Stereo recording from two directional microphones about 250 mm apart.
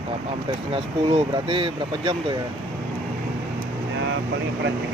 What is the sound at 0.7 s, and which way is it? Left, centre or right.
Speech, right.